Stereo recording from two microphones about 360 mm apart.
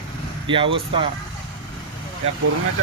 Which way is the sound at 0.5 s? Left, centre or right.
Centre.